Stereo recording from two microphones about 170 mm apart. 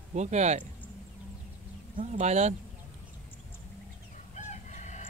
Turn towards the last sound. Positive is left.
turn(degrees=45)  # may be behind; listen again after turning